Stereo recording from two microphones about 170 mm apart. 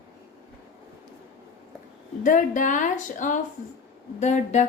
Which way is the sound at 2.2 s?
50° left (ahead or behind).